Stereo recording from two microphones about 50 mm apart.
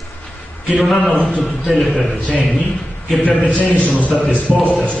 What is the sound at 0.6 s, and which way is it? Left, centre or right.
A man's voice, centre.